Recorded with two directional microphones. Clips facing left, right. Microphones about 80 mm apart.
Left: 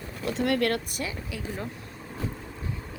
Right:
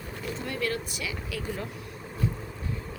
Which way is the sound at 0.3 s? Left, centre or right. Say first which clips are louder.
Left 7 dB; left.